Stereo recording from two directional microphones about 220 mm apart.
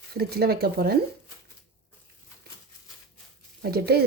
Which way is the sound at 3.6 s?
45° right (ahead or behind).